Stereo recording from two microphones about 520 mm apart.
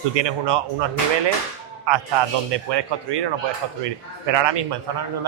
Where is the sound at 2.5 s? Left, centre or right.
Right.